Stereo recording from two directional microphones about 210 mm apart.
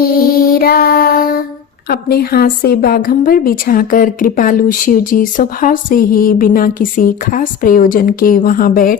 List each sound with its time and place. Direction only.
0.0 s music: 45° left (ahead or behind)
1.9 s a woman's voice: 45° left (ahead or behind)